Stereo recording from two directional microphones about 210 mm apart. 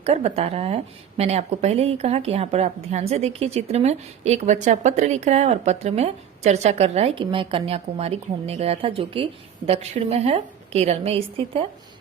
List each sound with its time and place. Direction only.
0.0 s speech: 30° right (ahead or behind)